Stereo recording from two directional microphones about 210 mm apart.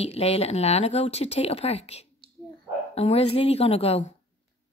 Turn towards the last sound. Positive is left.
turn(degrees=30)  # may be behind; listen again after turning